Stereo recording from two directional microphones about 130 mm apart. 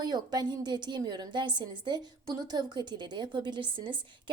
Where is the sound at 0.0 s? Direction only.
30° right (ahead or behind).